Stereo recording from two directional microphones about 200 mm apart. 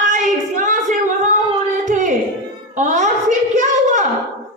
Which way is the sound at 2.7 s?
35° right (ahead or behind).